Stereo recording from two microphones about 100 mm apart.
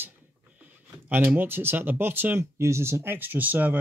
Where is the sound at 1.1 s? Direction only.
20° right (ahead or behind).